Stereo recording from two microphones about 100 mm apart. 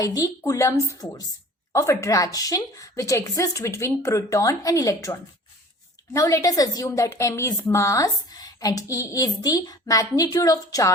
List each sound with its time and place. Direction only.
0.0 s a woman's voice: 35° left (ahead or behind)